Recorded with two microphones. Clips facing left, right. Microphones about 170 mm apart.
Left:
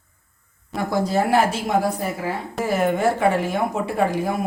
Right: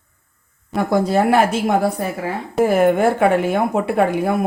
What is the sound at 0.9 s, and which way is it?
Speech, 60° right (ahead or behind).